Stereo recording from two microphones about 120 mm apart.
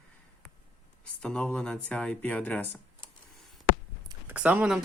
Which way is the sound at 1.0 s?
10° left (ahead or behind).